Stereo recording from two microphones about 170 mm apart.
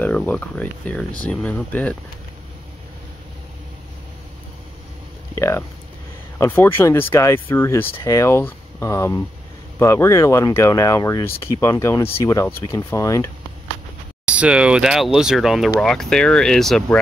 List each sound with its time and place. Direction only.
0.0 s speech: 10° left (ahead or behind)
5.3 s a sound: 15° left (ahead or behind)
6.3 s speech: 15° left (ahead or behind)
14.2 s speech: 5° right (ahead or behind)